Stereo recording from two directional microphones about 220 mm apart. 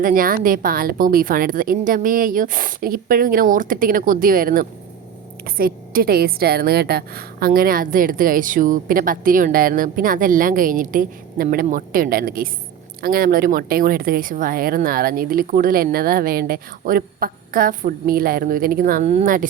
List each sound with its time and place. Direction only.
0.0 s a woman's voice: 40° right (ahead or behind)